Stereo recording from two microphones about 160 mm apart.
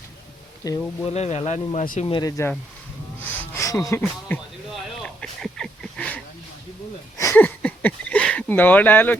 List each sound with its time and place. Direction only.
0.6 s speech: 20° left (ahead or behind)
1.0 s speech: 40° left (ahead or behind)
2.0 s speech: 25° left (ahead or behind)
3.2 s music: 15° left (ahead or behind)
4.7 s a sound: centre (ahead or behind)